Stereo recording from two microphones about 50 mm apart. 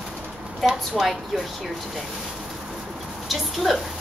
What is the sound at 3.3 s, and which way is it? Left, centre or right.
Speech, centre.